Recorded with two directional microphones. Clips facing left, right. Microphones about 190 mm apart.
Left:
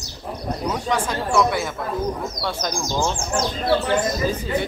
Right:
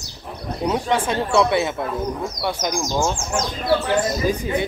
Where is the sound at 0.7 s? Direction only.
25° right (ahead or behind).